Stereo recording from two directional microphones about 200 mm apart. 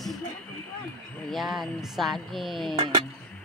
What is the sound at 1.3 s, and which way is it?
A woman's voice, centre (ahead or behind).